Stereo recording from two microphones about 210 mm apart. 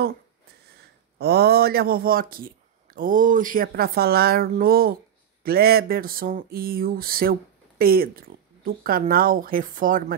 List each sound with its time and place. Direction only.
1.1 s speech: 50° right (ahead or behind)